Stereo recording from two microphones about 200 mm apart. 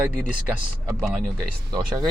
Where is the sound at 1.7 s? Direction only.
20° right (ahead or behind).